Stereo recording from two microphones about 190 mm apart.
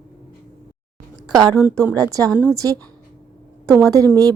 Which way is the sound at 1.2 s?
20° right (ahead or behind).